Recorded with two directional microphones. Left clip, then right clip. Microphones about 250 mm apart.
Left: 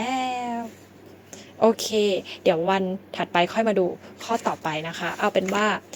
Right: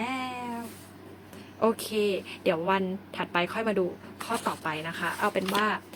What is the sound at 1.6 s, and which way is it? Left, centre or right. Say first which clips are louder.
Speech: left 6 dB; centre.